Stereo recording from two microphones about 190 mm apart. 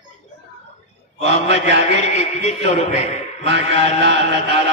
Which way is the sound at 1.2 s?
35° left (ahead or behind).